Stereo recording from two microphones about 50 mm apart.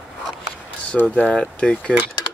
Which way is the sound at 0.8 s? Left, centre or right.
Left.